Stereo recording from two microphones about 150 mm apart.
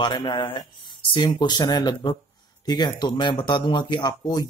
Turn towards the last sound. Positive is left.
turn(degrees=25)  # may be behind; listen again after turning